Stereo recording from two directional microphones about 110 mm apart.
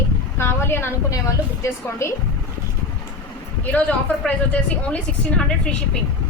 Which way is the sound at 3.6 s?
15° left (ahead or behind).